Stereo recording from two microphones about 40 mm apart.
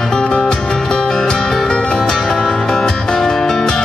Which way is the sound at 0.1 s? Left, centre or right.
Centre.